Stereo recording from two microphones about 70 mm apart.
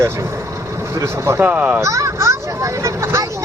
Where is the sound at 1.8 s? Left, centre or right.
Right.